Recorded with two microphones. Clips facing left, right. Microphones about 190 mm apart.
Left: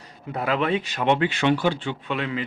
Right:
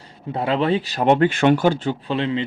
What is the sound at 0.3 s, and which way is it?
Speech, 30° right (ahead or behind).